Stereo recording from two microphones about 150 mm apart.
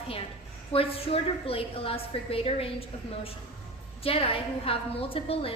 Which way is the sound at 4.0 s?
40° left (ahead or behind).